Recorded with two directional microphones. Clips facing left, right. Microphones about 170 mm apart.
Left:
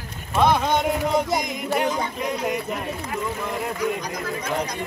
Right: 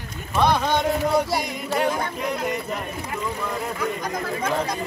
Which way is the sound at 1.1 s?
20° left (ahead or behind).